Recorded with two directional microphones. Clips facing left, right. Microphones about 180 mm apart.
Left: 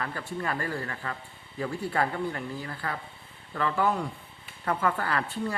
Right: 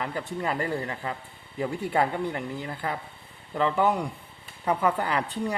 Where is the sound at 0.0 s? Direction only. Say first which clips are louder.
Right 3 dB; 20° right (ahead or behind).